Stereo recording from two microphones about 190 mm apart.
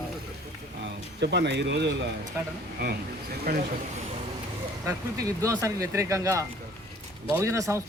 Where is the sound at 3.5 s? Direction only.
55° right (ahead or behind).